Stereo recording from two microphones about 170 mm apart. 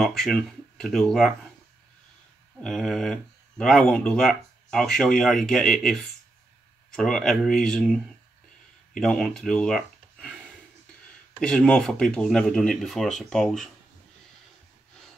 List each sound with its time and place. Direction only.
0.0 s speech: centre (ahead or behind)
2.6 s speech: centre (ahead or behind)
11.3 s speech: 5° left (ahead or behind)